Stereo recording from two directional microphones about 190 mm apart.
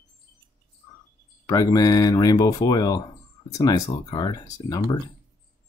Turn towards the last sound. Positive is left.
turn(degrees=20)  # may be behind; listen again after turning